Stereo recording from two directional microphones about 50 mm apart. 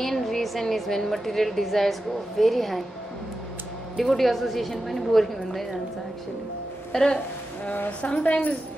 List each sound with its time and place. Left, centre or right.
0.0 s a woman's voice: centre
4.0 s a woman's voice: centre
6.9 s speech: centre
8.0 s a woman's voice: left